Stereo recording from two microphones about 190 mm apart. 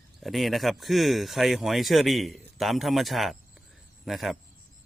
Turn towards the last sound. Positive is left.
turn(degrees=0)  # may be behind; listen again after turning